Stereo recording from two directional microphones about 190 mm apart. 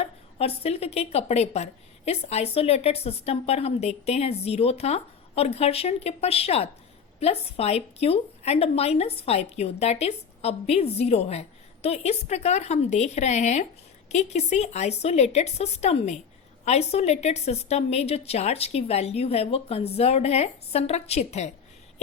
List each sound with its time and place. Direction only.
0.0 s speech: 30° left (ahead or behind)